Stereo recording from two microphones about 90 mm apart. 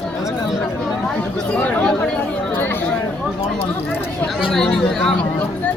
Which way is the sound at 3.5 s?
25° left (ahead or behind).